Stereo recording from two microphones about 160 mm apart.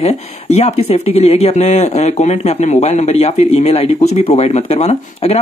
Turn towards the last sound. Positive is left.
turn(degrees=40)  # may be behind; listen again after turning